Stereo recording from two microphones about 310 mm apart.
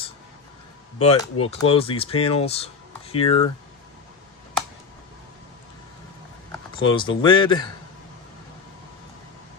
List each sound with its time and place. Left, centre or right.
1.0 s speech: centre
6.7 s speech: centre